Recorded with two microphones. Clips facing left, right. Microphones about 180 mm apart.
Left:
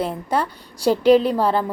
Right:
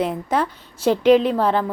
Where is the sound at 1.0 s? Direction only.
35° left (ahead or behind).